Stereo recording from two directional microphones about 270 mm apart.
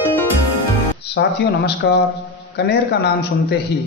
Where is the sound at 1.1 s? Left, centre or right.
Left.